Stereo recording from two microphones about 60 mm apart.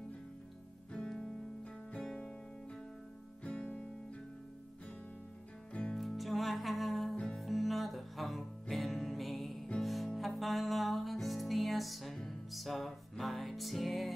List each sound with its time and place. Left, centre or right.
0.9 s music: centre
3.4 s music: centre
5.7 s music: centre
5.9 s music: centre
7.2 s music: centre
7.4 s music: centre